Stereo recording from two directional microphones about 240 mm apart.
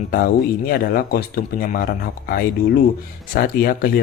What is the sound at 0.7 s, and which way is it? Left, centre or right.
Speech, left.